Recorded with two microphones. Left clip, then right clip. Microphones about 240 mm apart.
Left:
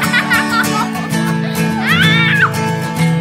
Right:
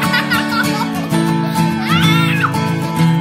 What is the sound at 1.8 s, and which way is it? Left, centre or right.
Music, right.